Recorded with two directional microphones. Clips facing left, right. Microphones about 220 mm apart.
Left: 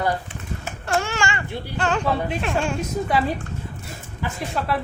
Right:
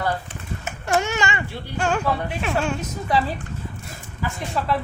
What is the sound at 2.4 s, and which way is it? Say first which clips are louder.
Speech: even; centre (ahead or behind).